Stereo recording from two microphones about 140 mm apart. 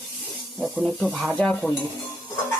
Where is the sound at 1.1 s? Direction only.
10° right (ahead or behind).